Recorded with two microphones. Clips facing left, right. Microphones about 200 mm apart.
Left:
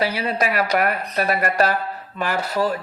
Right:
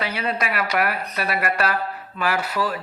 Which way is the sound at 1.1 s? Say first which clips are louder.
Left 4 dB; 40° left (ahead or behind).